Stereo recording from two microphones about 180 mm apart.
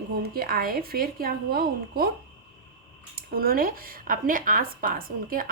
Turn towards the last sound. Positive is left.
turn(degrees=-50)  # may be behind; listen again after turning